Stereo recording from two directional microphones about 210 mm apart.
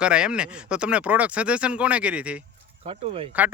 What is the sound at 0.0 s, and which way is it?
Speech, 5° right (ahead or behind).